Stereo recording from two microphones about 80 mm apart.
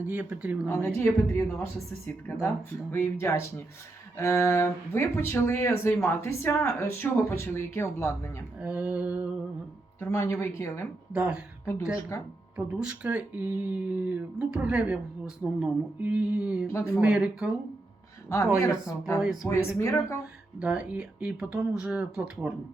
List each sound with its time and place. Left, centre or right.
0.0 s speech: right
0.9 s speech: left
2.9 s speech: left
8.6 s speech: centre
10.0 s speech: left
11.1 s speech: centre
12.1 s speech: left
12.5 s speech: centre
16.6 s speech: left
17.0 s speech: centre
18.3 s speech: left
19.2 s speech: centre
19.5 s speech: left
20.6 s speech: centre